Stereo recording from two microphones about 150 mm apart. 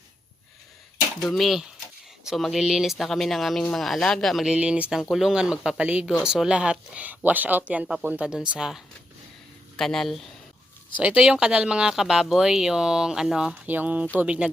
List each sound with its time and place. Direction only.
1.2 s speech: centre (ahead or behind)